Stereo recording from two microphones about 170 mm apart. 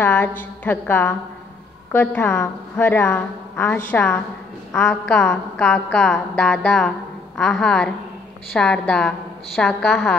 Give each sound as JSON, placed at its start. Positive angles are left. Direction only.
{"t": 0.0, "sound": "a woman's voice", "side_deg": 10}